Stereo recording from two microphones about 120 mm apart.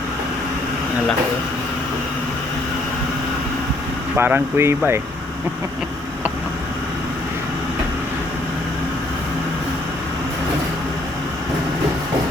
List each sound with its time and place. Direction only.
4.2 s speech: 20° right (ahead or behind)